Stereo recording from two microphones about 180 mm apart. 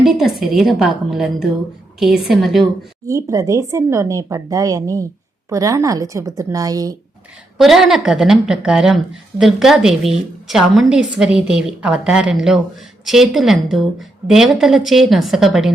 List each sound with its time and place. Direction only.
0.0 s a woman's voice: centre (ahead or behind)
3.1 s speech: 15° right (ahead or behind)
7.6 s a woman's voice: centre (ahead or behind)